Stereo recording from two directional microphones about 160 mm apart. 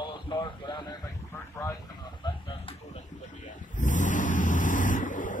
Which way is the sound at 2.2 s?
25° left (ahead or behind).